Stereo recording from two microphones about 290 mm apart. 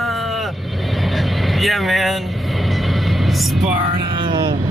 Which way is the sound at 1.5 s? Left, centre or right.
Centre.